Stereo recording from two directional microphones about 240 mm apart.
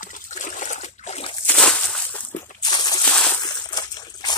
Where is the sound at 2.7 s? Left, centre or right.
Centre.